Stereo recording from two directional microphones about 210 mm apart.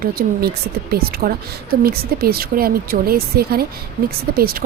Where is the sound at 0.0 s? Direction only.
45° right (ahead or behind).